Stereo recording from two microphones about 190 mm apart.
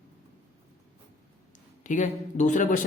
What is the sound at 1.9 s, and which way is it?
Speech, 40° left (ahead or behind).